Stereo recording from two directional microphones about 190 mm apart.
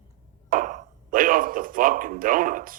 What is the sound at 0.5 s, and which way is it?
Speech, 45° right (ahead or behind).